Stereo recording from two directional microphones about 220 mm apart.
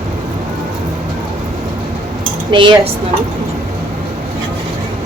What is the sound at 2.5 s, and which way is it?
Speech, 20° right (ahead or behind).